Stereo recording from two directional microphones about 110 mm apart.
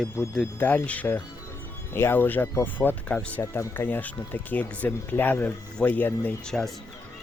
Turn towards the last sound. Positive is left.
turn(degrees=5)  # may be behind; listen again after turning